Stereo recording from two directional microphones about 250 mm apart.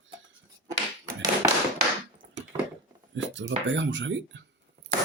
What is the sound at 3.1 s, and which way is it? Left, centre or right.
Speech, right.